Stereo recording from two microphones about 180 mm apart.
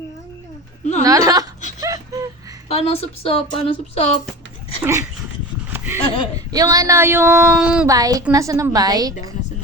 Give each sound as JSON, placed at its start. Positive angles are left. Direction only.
{"t": 1.0, "sound": "a woman's voice", "side_deg": -20}
{"t": 1.8, "sound": "whimper", "side_deg": -20}
{"t": 2.6, "sound": "speech", "side_deg": 35}
{"t": 4.8, "sound": "speech", "side_deg": -15}
{"t": 5.7, "sound": "a sound", "side_deg": -10}
{"t": 6.3, "sound": "speech", "side_deg": -20}
{"t": 7.9, "sound": "a woman's voice", "side_deg": -20}